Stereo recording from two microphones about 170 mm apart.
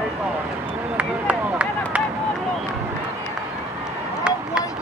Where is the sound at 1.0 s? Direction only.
10° right (ahead or behind).